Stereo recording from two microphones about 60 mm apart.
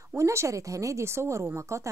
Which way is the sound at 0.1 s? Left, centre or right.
Right.